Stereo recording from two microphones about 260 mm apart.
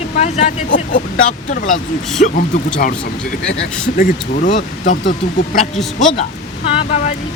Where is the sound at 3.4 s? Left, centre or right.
Left.